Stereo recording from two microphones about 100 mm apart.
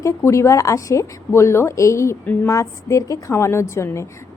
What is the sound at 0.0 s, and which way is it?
A woman's voice, 30° left (ahead or behind).